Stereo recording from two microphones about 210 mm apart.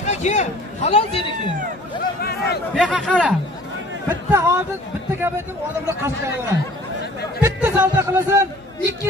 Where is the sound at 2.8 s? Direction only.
5° left (ahead or behind).